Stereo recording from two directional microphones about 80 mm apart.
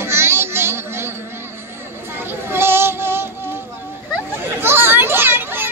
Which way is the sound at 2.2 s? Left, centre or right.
Right.